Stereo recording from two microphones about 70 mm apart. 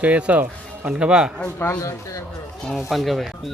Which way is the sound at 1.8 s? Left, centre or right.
Left.